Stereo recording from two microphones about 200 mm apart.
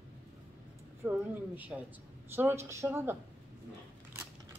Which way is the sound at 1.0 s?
10° right (ahead or behind).